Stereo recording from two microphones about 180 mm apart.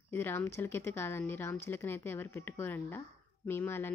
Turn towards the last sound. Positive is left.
turn(degrees=10)  # may be behind; listen again after turning